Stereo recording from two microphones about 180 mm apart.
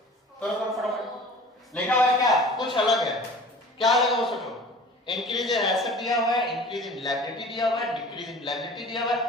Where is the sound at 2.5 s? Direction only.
25° left (ahead or behind).